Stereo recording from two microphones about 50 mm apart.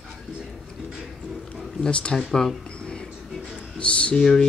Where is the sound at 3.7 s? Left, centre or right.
Left.